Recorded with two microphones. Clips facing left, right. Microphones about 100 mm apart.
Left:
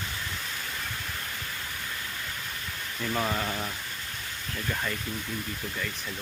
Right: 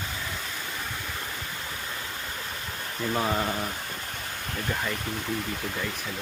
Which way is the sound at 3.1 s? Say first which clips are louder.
Right 3 dB; 20° right (ahead or behind).